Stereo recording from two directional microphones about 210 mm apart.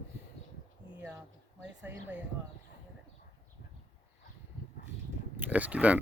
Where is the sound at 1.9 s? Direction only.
10° right (ahead or behind).